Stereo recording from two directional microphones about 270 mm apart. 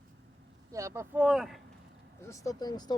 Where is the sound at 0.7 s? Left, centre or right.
Centre.